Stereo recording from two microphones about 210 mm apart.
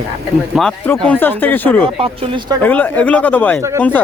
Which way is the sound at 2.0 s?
25° right (ahead or behind).